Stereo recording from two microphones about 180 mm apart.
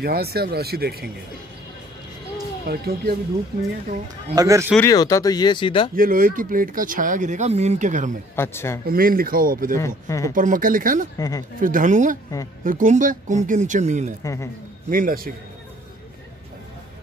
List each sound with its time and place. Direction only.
0.0 s speech: 60° right (ahead or behind)
2.6 s speech: 60° right (ahead or behind)
4.4 s speech: 15° right (ahead or behind)
4.7 s speech: 20° left (ahead or behind)
5.9 s speech: 50° right (ahead or behind)
8.4 s speech: 15° left (ahead or behind)
8.8 s speech: 55° right (ahead or behind)
9.8 s speech: 15° left (ahead or behind)
10.3 s speech: 50° right (ahead or behind)
11.1 s speech: 20° left (ahead or behind)
11.6 s speech: 45° right (ahead or behind)
14.2 s speech: 15° left (ahead or behind)
14.9 s speech: 50° right (ahead or behind)